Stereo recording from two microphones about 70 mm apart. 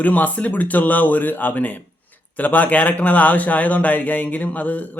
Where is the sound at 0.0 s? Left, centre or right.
Left.